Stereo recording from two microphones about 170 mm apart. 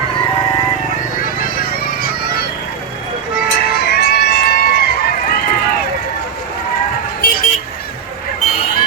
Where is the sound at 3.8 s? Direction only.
70° left (ahead or behind).